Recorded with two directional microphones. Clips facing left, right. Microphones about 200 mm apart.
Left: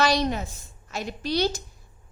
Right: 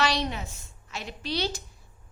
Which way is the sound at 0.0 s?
45° left (ahead or behind).